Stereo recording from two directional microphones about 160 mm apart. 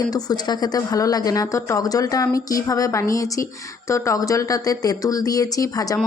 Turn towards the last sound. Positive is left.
turn(degrees=20)  # may be behind; listen again after turning